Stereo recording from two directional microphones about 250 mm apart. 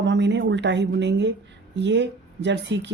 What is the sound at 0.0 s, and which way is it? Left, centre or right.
Speech, right.